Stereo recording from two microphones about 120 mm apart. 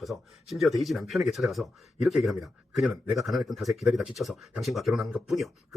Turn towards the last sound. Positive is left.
turn(degrees=0)  # may be behind; listen again after turning